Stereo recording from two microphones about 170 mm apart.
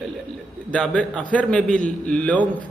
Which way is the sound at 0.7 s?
5° left (ahead or behind).